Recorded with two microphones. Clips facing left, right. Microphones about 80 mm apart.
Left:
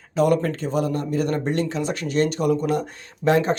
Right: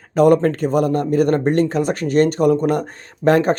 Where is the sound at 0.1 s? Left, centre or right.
Right.